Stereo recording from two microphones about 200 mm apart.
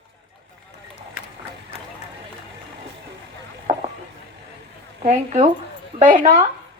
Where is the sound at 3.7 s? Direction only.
30° right (ahead or behind).